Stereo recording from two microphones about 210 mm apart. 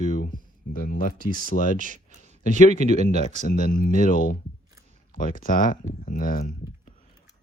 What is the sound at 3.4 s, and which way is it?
Speech, 40° left (ahead or behind).